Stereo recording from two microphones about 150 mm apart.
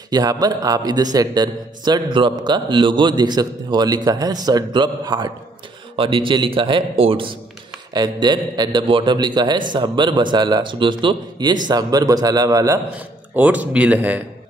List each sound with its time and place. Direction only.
0.1 s a man's voice: 25° right (ahead or behind)
13.4 s speech: 10° right (ahead or behind)